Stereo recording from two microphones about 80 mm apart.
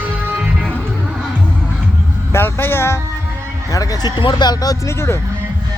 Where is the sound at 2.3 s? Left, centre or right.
Left.